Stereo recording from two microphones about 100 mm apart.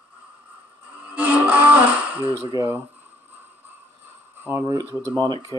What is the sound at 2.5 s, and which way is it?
Speech, 35° right (ahead or behind).